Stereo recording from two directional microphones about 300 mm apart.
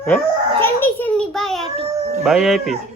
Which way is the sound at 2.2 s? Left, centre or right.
Centre.